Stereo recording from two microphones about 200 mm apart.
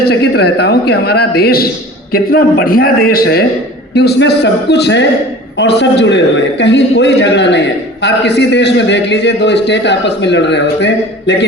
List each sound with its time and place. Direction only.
0.0 s a man's voice: 55° left (ahead or behind)